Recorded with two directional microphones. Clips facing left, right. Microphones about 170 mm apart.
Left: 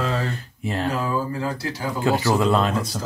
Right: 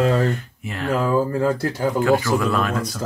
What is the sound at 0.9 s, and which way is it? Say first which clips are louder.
Speech: right 9 dB; 50° right (ahead or behind).